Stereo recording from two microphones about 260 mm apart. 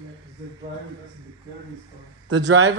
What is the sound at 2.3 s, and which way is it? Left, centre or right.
Speech, right.